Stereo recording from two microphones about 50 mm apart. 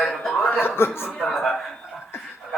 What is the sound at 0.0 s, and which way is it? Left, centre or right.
Chuckle, centre.